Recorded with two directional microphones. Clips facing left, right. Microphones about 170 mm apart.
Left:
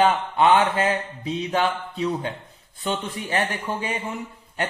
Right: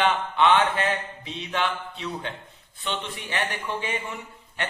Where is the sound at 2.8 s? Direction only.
40° left (ahead or behind).